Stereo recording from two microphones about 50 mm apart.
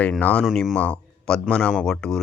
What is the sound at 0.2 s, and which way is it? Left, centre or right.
Speech, left.